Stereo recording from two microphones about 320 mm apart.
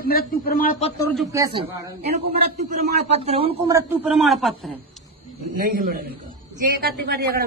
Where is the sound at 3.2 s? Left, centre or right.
Centre.